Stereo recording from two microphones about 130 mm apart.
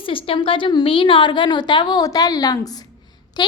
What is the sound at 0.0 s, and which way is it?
A woman's voice, 40° left (ahead or behind).